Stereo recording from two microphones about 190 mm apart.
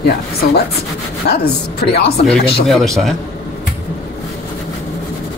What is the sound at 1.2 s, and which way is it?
Speech, 60° left (ahead or behind).